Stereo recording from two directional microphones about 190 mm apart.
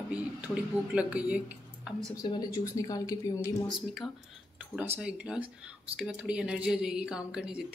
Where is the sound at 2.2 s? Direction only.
20° left (ahead or behind).